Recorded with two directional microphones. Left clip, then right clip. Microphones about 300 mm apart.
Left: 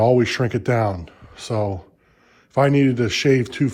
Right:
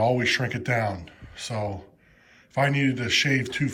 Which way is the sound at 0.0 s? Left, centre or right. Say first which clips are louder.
Left 5 dB; left.